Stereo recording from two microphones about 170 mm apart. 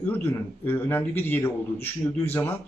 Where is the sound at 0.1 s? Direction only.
10° left (ahead or behind).